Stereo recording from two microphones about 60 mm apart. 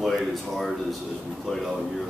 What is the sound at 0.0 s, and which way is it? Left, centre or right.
Speech, centre.